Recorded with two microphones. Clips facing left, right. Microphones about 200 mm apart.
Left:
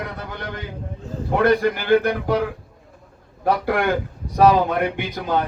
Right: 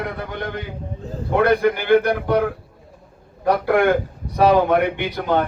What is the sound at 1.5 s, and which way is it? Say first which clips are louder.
Speech: right 2 dB; 55° right (ahead or behind).